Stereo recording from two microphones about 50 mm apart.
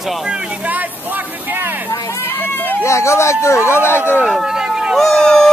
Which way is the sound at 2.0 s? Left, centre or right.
Left.